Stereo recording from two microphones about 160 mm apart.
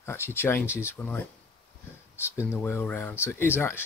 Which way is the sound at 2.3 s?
15° left (ahead or behind).